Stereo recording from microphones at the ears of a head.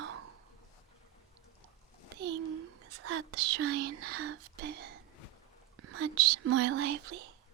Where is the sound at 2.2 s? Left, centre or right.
Right.